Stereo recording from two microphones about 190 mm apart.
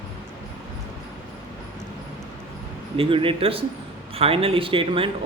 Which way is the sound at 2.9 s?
30° right (ahead or behind).